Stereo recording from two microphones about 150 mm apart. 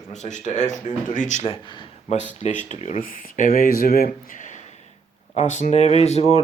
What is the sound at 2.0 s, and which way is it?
Speech, 50° left (ahead or behind).